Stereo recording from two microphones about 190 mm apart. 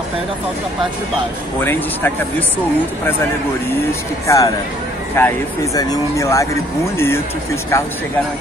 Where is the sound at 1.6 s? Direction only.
10° left (ahead or behind).